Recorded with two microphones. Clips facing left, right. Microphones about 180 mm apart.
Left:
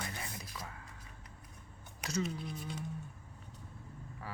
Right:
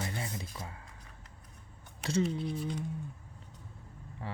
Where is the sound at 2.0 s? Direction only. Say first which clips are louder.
Right 6 dB; 25° right (ahead or behind).